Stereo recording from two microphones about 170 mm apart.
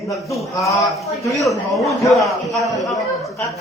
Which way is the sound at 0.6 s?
20° left (ahead or behind).